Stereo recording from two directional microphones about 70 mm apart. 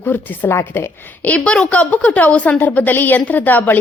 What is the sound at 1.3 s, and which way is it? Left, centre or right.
A woman's voice, centre.